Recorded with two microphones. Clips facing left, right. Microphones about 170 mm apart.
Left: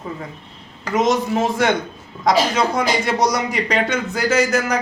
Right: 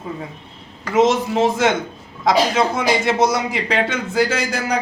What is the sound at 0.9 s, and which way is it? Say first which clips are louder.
Speech: right 2 dB; 25° right (ahead or behind).